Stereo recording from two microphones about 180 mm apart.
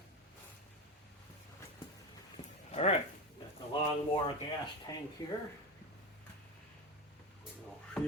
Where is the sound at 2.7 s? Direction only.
35° left (ahead or behind).